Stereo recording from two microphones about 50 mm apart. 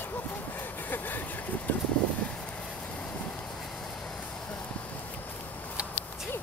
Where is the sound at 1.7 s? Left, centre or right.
Left.